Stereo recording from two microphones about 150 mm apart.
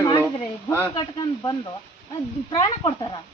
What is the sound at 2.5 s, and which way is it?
Speech, 30° left (ahead or behind).